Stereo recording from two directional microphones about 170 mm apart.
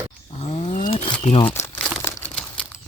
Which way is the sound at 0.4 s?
40° left (ahead or behind).